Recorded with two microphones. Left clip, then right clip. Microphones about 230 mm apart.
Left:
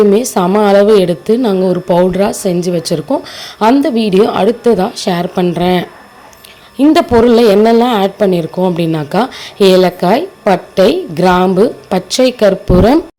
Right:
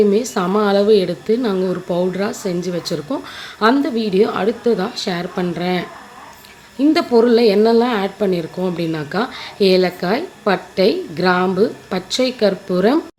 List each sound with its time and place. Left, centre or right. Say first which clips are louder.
0.1 s a woman's voice: left 7 dB; left